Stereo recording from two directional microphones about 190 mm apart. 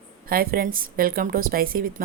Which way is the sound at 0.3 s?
50° right (ahead or behind).